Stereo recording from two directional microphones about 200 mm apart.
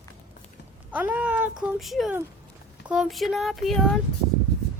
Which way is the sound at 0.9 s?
10° right (ahead or behind).